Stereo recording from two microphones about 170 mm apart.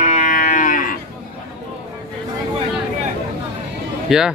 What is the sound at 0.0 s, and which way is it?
Cattle, 45° left (ahead or behind).